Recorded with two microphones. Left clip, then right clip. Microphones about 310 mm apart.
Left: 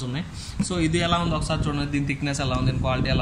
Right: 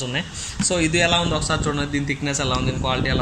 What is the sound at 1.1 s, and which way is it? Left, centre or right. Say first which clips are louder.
A man's voice: right 4 dB; left.